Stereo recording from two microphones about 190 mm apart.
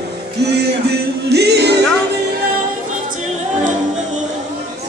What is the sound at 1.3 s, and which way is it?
Music, 60° right (ahead or behind).